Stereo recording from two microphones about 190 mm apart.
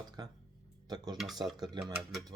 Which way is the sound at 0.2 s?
20° right (ahead or behind).